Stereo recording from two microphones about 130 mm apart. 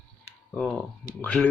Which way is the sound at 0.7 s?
10° left (ahead or behind).